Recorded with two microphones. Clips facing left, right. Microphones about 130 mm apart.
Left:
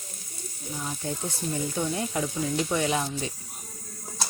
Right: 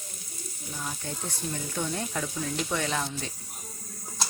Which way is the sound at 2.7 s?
15° left (ahead or behind).